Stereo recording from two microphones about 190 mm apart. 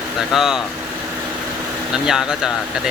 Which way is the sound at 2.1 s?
5° right (ahead or behind).